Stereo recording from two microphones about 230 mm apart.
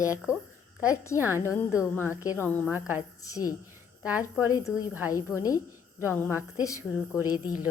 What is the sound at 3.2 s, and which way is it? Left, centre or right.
Speech, centre.